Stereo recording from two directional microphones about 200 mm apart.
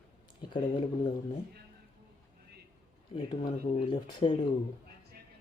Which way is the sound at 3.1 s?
25° left (ahead or behind).